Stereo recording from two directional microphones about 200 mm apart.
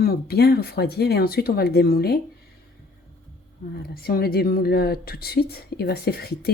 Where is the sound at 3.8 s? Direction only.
50° left (ahead or behind).